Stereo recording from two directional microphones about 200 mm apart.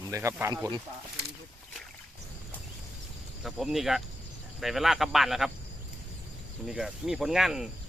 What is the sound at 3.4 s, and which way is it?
Speech, centre (ahead or behind).